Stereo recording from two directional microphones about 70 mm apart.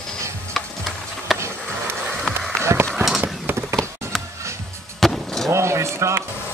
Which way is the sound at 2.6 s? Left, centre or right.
Right.